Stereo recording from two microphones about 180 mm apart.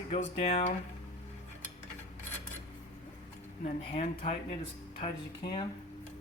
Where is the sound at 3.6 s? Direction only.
35° left (ahead or behind).